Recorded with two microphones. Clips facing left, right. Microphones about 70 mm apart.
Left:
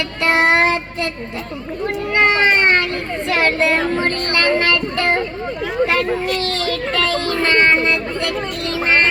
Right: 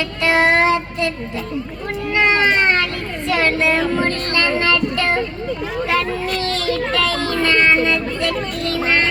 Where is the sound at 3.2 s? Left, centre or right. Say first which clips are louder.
Even; left.